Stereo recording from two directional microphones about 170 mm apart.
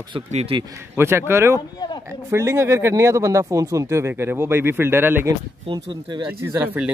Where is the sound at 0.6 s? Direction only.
15° right (ahead or behind).